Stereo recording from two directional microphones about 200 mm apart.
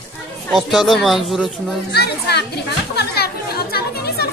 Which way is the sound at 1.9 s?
55° left (ahead or behind).